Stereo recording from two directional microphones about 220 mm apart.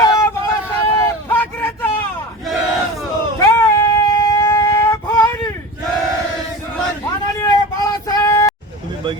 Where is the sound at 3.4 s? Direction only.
15° left (ahead or behind).